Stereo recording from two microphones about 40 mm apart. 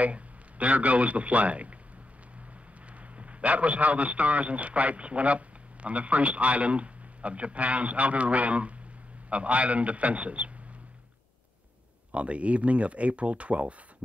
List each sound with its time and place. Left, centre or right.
0.0 s a man's voice: right
3.2 s a man's voice: right
12.1 s a man's voice: right